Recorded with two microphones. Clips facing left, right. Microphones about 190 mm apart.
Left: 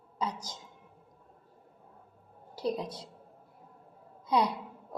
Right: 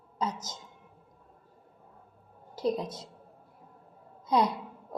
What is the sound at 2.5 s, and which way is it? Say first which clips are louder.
Speech: right 3 dB; 45° right (ahead or behind).